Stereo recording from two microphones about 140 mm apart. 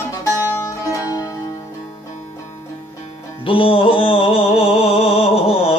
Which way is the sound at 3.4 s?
40° left (ahead or behind).